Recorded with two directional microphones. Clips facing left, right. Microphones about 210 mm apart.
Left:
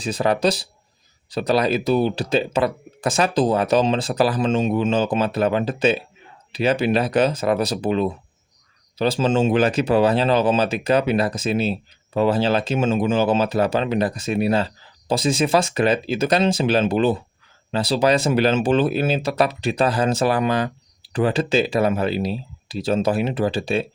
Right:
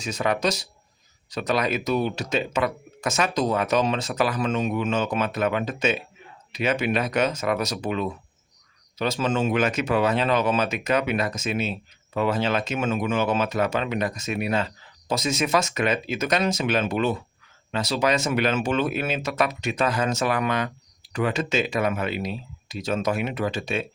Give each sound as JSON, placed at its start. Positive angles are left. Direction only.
{"t": 0.0, "sound": "speech", "side_deg": 35}